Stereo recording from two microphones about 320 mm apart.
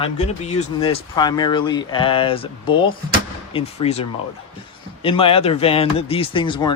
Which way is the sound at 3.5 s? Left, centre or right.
Centre.